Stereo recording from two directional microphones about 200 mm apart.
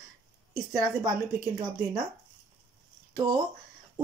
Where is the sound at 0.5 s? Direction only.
20° right (ahead or behind).